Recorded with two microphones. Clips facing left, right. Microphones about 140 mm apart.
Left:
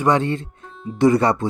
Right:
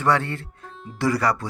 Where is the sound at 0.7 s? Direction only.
Centre (ahead or behind).